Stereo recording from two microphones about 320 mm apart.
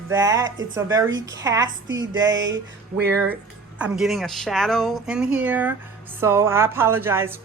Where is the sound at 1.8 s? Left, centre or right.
Right.